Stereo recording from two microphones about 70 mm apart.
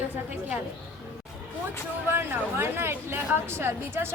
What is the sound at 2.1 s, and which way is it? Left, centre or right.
Speech, right.